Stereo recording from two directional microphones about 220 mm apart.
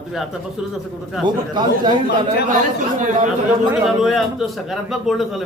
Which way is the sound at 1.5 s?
20° right (ahead or behind).